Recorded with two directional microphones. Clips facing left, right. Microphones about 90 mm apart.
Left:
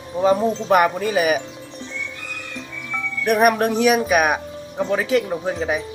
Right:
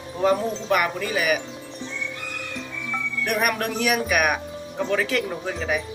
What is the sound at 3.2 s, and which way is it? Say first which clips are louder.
Speech: left 8 dB; 30° left (ahead or behind).